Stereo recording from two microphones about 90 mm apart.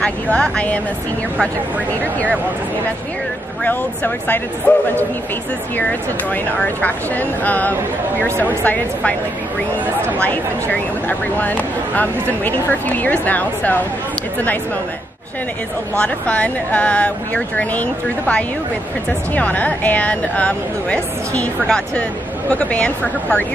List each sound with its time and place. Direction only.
0.0 s a woman's voice: 10° left (ahead or behind)
3.6 s speech: 20° left (ahead or behind)
5.8 s speech: 15° left (ahead or behind)
10.1 s a woman's voice: 20° left (ahead or behind)
16.0 s a woman's voice: 15° left (ahead or behind)